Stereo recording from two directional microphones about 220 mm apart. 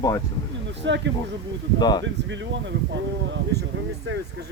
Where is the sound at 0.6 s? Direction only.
55° right (ahead or behind).